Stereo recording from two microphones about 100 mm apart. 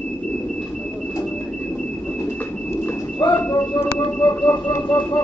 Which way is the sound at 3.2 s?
45° left (ahead or behind).